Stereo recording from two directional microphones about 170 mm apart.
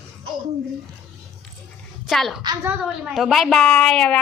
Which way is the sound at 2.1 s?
Centre (ahead or behind).